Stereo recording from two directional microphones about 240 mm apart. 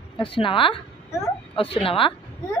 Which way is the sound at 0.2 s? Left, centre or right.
Left.